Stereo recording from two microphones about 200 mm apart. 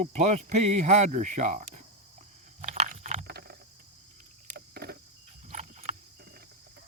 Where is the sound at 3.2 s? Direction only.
50° right (ahead or behind).